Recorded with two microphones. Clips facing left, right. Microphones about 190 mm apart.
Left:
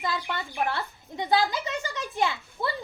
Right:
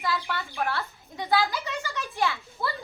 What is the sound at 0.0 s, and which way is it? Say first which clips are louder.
Speech: right 1 dB; 20° left (ahead or behind).